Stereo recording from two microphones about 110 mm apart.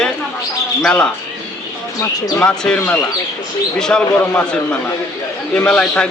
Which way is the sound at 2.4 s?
10° left (ahead or behind).